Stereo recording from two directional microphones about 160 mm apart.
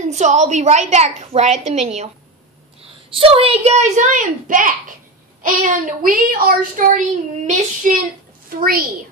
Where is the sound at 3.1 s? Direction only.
35° right (ahead or behind); by 7.0 s 60° right (ahead or behind).